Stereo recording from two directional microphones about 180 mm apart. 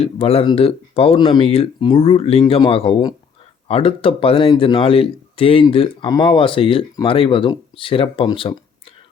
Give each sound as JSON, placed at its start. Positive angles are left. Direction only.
{"t": 0.0, "sound": "a man's voice", "side_deg": 35}